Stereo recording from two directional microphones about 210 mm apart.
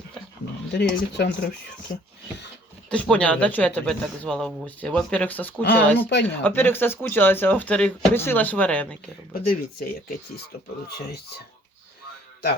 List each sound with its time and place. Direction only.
0.7 s speech: 55° left (ahead or behind)
2.9 s speech: 5° left (ahead or behind)
9.3 s speech: 45° left (ahead or behind)